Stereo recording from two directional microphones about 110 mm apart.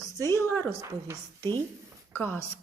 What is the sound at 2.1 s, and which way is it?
Speech, 20° left (ahead or behind).